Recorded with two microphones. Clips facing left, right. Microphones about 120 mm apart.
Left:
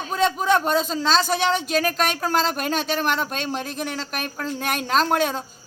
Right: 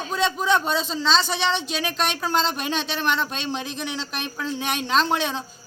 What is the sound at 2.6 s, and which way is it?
Speech, 45° left (ahead or behind).